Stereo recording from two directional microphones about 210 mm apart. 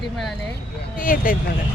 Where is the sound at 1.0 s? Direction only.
40° left (ahead or behind).